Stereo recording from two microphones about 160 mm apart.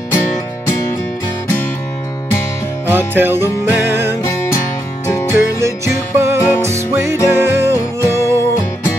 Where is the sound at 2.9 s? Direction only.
15° right (ahead or behind).